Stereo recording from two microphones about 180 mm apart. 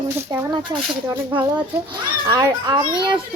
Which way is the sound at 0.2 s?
15° right (ahead or behind).